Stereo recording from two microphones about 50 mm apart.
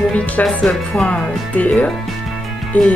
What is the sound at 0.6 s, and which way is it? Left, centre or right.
Speech, centre.